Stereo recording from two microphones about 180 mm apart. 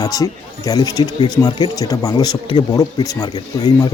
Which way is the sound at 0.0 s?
20° left (ahead or behind).